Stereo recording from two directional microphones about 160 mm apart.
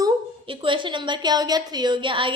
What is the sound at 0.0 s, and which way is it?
A woman's voice, 30° right (ahead or behind).